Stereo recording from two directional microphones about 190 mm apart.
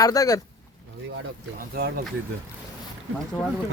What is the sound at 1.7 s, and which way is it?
Speech, 55° right (ahead or behind).